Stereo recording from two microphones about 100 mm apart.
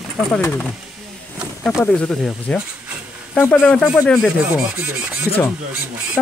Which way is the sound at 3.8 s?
Centre (ahead or behind).